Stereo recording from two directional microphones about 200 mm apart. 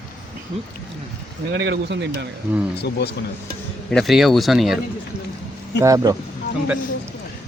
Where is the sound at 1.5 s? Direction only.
60° right (ahead or behind).